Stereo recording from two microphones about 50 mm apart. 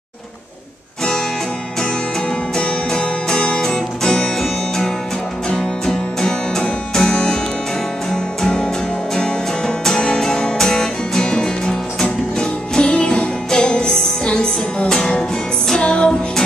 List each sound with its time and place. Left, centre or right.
1.8 s music: centre
5.5 s music: centre